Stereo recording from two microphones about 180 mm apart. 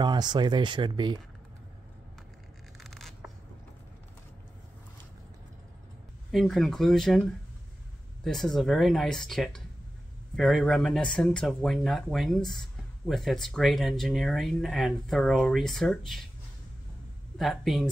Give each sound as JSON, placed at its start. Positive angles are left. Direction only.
{"t": 0.0, "sound": "speech", "side_deg": -25}
{"t": 2.8, "sound": "a sound", "side_deg": 0}
{"t": 6.3, "sound": "speech", "side_deg": 0}
{"t": 8.2, "sound": "speech", "side_deg": 0}
{"t": 17.4, "sound": "speech", "side_deg": 0}